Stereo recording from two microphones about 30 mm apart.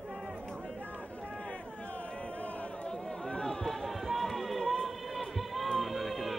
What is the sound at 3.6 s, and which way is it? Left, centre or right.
Run, centre.